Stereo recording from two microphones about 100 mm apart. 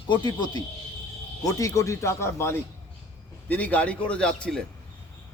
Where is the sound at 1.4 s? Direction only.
35° left (ahead or behind); by 4.6 s 5° left (ahead or behind).